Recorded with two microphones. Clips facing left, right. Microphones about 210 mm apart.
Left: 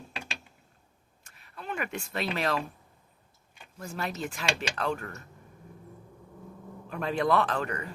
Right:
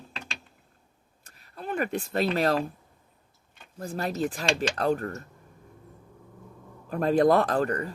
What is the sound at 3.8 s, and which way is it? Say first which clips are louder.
Speech: right 6 dB; 35° right (ahead or behind).